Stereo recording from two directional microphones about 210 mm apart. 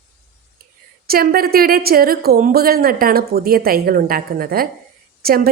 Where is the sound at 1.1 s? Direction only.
45° right (ahead or behind).